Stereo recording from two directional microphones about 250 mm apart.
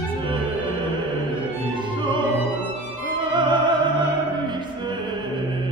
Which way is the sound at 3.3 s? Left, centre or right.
Centre.